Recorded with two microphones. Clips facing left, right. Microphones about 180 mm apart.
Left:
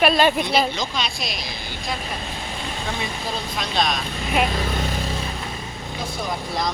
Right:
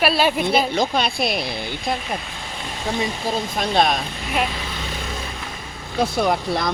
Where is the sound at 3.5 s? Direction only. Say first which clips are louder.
Right 5 dB; 50° right (ahead or behind).